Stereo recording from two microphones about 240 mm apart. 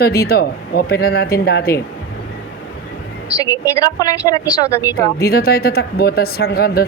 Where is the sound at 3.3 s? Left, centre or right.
Centre.